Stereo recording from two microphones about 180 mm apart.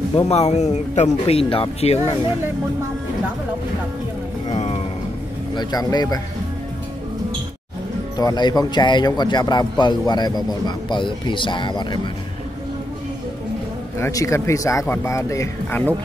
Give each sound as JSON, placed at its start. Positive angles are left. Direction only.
{"t": 0.1, "sound": "speech", "side_deg": 35}
{"t": 4.5, "sound": "a sound", "side_deg": 35}
{"t": 5.5, "sound": "speech", "side_deg": 25}
{"t": 8.2, "sound": "speech", "side_deg": 20}
{"t": 13.9, "sound": "speech", "side_deg": 15}